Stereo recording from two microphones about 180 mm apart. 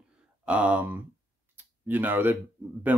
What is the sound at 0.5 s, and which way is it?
Speech, 5° right (ahead or behind).